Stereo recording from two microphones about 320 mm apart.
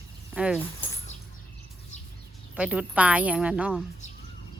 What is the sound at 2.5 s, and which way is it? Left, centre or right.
A woman's voice, centre.